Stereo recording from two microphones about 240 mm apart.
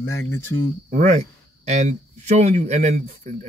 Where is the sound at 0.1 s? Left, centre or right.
Centre.